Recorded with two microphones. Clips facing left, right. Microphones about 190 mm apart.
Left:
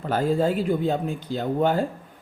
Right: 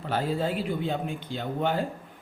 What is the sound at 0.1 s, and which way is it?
Speech, 45° left (ahead or behind).